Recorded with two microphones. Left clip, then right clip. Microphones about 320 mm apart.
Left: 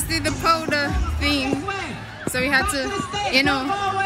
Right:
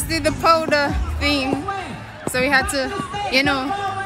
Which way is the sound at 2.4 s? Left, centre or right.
Centre.